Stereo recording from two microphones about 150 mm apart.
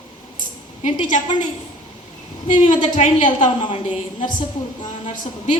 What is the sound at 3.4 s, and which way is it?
Speech, 35° left (ahead or behind).